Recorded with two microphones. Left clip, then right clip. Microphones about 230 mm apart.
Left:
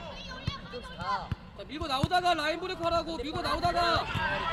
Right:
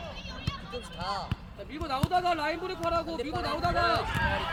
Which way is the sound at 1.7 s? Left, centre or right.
Left.